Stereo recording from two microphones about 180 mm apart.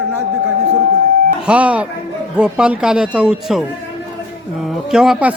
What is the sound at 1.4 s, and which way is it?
Speech, 5° right (ahead or behind).